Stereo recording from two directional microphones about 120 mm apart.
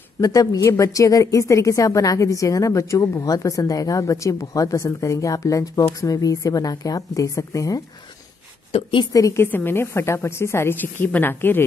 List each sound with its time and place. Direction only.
0.2 s a woman's voice: 30° left (ahead or behind)
8.7 s a woman's voice: 45° left (ahead or behind)
9.1 s a woman's voice: 25° left (ahead or behind)